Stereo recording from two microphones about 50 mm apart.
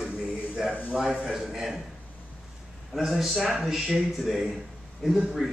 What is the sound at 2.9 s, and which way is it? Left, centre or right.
A man's voice, centre.